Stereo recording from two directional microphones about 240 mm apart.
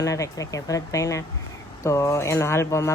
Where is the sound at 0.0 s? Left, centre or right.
Centre.